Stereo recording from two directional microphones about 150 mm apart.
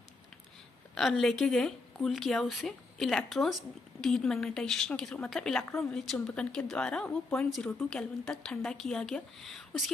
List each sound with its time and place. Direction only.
0.9 s a woman's voice: centre (ahead or behind)